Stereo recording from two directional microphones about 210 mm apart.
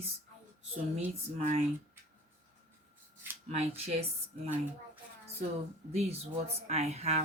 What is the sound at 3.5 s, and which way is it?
Speech, 30° right (ahead or behind).